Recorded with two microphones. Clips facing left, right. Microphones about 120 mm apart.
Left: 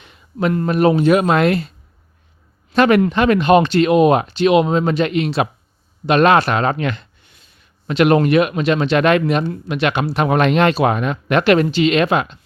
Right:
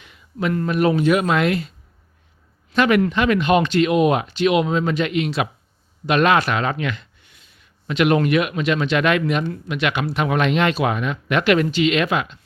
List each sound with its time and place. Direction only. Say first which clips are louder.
0.0 s speech: left 4 dB; 35° left (ahead or behind)
2.7 s speech: left 4 dB; 35° left (ahead or behind)